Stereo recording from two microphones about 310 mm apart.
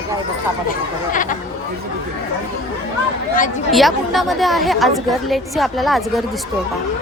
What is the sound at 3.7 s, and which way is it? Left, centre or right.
A woman's voice, centre.